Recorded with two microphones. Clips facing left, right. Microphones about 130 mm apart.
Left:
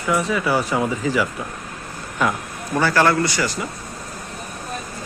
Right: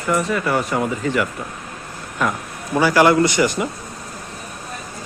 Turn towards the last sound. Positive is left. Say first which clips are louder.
# right 5 dB
turn(degrees=-20)  # may be behind; listen again after turning